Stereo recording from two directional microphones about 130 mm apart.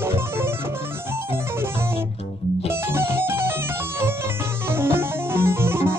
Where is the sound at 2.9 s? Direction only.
20° right (ahead or behind).